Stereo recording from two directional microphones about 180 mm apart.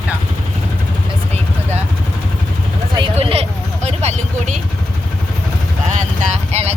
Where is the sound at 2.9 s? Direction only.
30° right (ahead or behind).